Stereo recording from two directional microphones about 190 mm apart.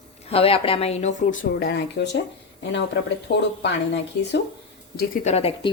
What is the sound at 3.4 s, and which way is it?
Speech, 60° left (ahead or behind).